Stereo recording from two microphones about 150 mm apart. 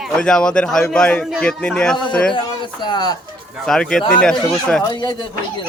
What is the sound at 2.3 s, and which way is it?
Speech, 30° left (ahead or behind).